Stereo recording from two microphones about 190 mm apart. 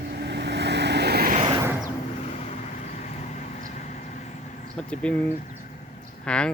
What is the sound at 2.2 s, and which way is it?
Vehicle, 35° left (ahead or behind).